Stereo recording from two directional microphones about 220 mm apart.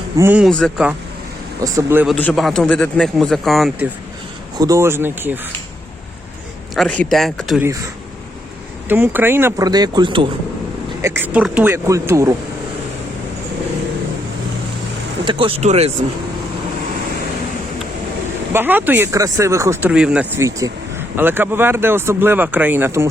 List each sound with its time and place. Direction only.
0.2 s speech: 5° right (ahead or behind)
1.6 s speech: 10° right (ahead or behind)
2.1 s speech: 5° left (ahead or behind)
4.5 s speech: 15° right (ahead or behind)
6.7 s speech: 5° left (ahead or behind)
7.6 s speech: 15° right (ahead or behind)
8.9 s speech: 10° right (ahead or behind)
11.0 s speech: 10° right (ahead or behind)
15.2 s speech: 20° right (ahead or behind)
18.5 s speech: 10° right (ahead or behind)